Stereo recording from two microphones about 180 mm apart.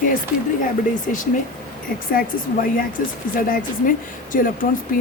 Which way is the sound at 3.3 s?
50° left (ahead or behind).